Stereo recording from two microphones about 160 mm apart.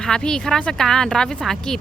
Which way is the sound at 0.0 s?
5° left (ahead or behind).